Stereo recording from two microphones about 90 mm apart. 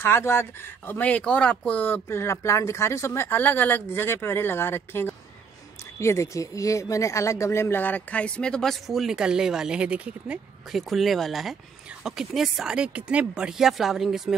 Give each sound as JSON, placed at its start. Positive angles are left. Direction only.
{"t": 0.0, "sound": "speech", "side_deg": 25}
{"t": 10.7, "sound": "speech", "side_deg": 0}